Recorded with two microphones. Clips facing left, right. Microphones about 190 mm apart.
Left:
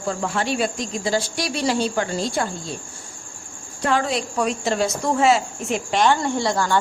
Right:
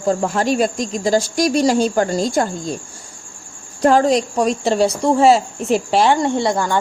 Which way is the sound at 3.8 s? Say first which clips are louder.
Right 8 dB; 40° right (ahead or behind).